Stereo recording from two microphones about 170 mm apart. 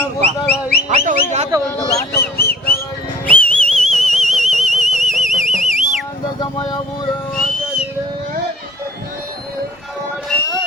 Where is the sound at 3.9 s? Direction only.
Centre (ahead or behind).